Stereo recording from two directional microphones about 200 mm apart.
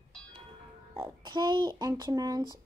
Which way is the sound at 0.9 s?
20° right (ahead or behind).